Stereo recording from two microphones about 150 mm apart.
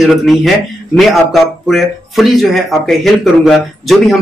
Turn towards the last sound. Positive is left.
turn(degrees=0)  # may be behind; listen again after turning